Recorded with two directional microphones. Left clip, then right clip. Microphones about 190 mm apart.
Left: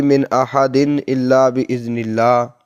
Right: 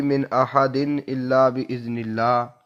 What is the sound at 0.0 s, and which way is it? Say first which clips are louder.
Speech: left 6 dB; 40° left (ahead or behind).